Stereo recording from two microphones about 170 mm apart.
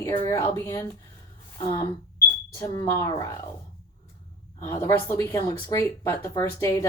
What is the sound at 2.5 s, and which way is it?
Speech, 15° left (ahead or behind).